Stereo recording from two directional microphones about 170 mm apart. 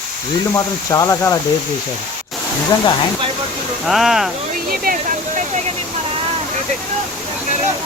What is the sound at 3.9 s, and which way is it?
Speech, centre (ahead or behind).